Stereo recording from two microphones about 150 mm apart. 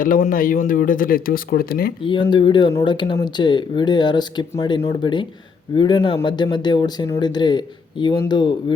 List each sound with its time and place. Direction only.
0.0 s speech: 65° left (ahead or behind); by 1.9 s 85° left
2.0 s speech: 30° left (ahead or behind)